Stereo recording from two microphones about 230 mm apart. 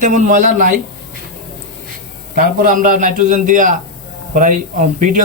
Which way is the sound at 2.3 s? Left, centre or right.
Right.